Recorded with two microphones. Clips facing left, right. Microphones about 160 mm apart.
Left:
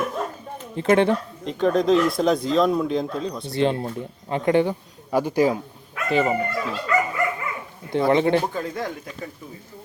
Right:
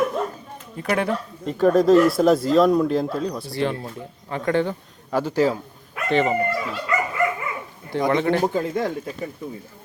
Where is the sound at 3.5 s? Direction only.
20° left (ahead or behind); by 6.4 s 5° left (ahead or behind).